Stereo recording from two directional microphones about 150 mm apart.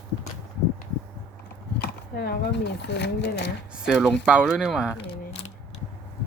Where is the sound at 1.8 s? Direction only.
90° left.